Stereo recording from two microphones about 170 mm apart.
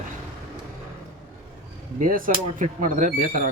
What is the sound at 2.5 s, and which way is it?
Speech, 50° right (ahead or behind).